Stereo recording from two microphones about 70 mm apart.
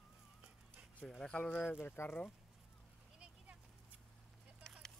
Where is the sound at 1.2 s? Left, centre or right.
Centre.